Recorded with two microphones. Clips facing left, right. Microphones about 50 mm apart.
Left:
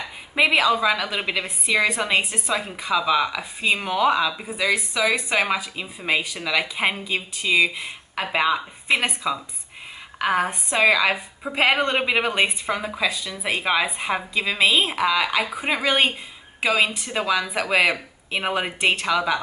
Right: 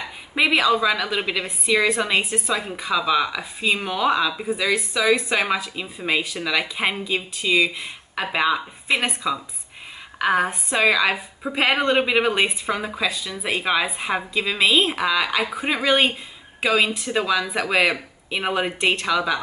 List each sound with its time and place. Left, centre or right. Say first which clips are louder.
0.4 s a woman's voice: even; centre
11.1 s a woman's voice: even; centre